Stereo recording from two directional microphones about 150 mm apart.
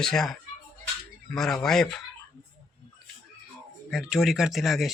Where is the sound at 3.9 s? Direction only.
Centre (ahead or behind).